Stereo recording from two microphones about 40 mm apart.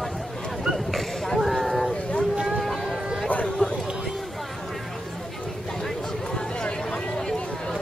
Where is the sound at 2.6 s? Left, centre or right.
Centre.